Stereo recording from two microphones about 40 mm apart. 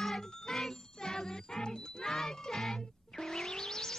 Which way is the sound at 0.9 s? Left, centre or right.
Centre.